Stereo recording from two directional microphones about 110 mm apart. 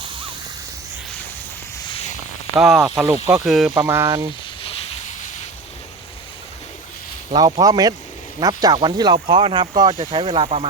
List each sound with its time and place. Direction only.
1.9 s a sound: 70° left (ahead or behind)
2.6 s speech: centre (ahead or behind)
3.8 s speech: 25° right (ahead or behind)
7.3 s speech: 35° right (ahead or behind)
9.1 s speech: 55° right (ahead or behind)